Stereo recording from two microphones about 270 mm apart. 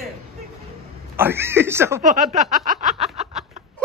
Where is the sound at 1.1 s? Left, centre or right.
Centre.